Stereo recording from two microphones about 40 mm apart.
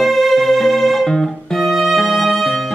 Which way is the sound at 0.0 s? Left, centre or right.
Centre.